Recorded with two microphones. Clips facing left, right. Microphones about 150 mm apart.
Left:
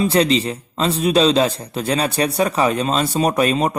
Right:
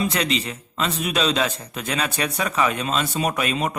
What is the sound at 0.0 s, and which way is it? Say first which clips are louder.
A man's voice: left 7 dB; 35° left (ahead or behind).